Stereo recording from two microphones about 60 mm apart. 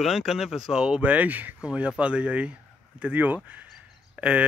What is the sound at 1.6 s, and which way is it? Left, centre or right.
Speech, centre.